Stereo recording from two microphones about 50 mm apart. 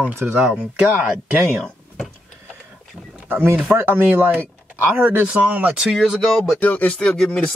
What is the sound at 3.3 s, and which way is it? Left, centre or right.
Speech, right.